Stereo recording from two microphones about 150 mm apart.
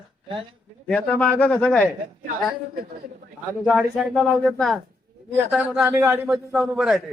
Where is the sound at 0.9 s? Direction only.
5° left (ahead or behind).